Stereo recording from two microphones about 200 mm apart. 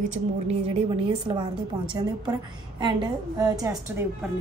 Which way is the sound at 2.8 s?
20° right (ahead or behind).